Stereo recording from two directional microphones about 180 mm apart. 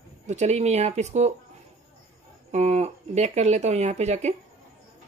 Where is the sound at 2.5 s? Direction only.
40° right (ahead or behind).